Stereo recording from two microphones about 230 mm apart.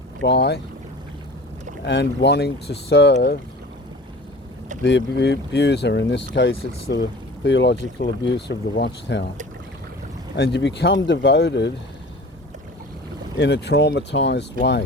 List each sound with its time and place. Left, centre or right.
0.2 s speech: left
1.8 s speech: left
4.8 s speech: left
10.3 s speech: left
13.4 s speech: left